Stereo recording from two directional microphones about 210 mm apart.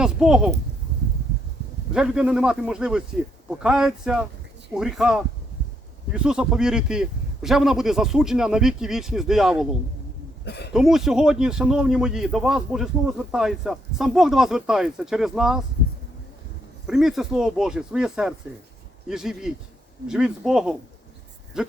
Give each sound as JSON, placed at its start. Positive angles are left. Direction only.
{"t": 0.0, "sound": "a man's voice", "side_deg": -5}
{"t": 1.9, "sound": "a man's voice", "side_deg": -5}
{"t": 10.4, "sound": "speech", "side_deg": 50}
{"t": 10.7, "sound": "a man's voice", "side_deg": 0}
{"t": 16.8, "sound": "a man's voice", "side_deg": 0}